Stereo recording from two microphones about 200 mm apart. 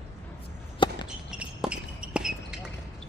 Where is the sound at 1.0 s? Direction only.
5° right (ahead or behind).